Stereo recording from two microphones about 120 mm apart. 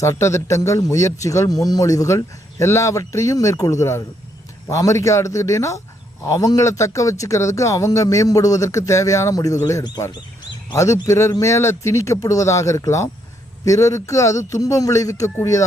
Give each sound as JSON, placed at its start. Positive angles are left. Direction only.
{"t": 0.0, "sound": "speech", "side_deg": 25}